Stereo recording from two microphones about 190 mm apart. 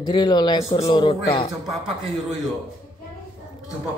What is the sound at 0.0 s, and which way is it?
Speech, 25° left (ahead or behind).